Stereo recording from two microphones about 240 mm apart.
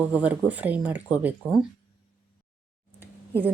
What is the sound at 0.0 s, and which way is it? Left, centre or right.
A woman's voice, centre.